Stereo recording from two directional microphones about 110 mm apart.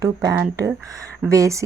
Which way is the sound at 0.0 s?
35° right (ahead or behind).